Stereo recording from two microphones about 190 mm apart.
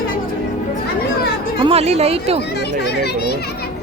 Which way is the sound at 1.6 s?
30° right (ahead or behind).